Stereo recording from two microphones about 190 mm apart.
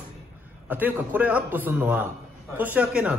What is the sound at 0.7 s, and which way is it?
Speech, 10° right (ahead or behind).